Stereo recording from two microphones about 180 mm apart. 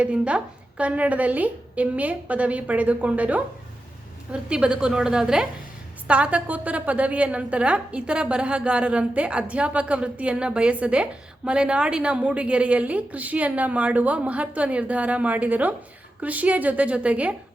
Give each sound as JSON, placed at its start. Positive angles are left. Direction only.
{"t": 0.0, "sound": "a woman's voice", "side_deg": -5}